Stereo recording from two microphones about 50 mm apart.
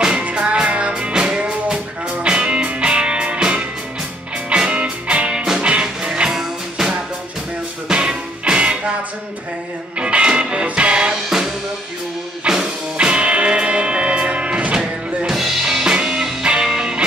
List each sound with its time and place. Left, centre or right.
0.2 s music: right
9.9 s music: right
11.2 s music: centre